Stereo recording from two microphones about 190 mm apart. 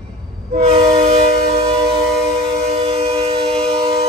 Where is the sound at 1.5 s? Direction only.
30° right (ahead or behind).